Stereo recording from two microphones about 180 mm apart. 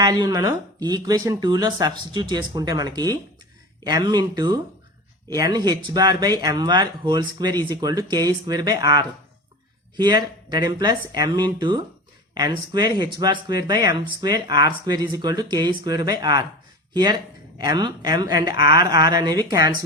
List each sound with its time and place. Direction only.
0.0 s speech: 20° right (ahead or behind)